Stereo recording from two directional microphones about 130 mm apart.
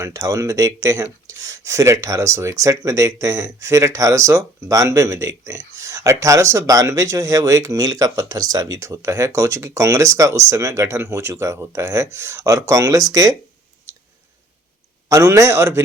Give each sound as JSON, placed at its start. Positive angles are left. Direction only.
{"t": 0.0, "sound": "speech", "side_deg": -25}
{"t": 15.1, "sound": "speech", "side_deg": -20}